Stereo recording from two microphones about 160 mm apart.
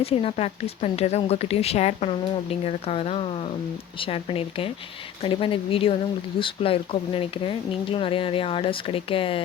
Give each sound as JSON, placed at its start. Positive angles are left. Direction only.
{"t": 0.0, "sound": "speech", "side_deg": 35}